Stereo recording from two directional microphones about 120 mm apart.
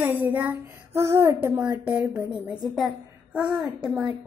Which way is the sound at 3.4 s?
10° right (ahead or behind).